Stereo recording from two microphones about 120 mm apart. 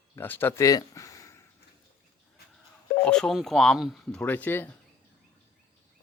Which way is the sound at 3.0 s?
5° left (ahead or behind).